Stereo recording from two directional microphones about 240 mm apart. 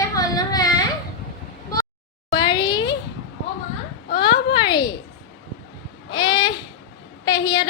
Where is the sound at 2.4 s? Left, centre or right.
Centre.